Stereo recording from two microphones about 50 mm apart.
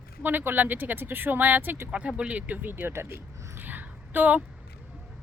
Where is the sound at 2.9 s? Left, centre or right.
Right.